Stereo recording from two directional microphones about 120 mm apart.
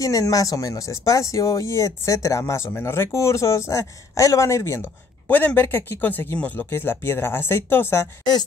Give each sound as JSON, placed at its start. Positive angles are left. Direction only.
{"t": 0.0, "sound": "speech", "side_deg": 30}
{"t": 5.3, "sound": "speech", "side_deg": 15}